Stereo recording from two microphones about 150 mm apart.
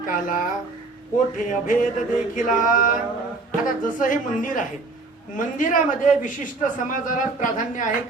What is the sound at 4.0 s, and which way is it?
A man's voice, 60° left (ahead or behind).